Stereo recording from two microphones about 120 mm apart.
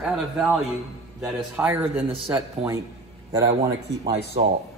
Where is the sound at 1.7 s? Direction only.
20° right (ahead or behind).